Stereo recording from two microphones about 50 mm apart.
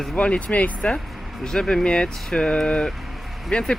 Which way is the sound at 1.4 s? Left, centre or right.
Centre.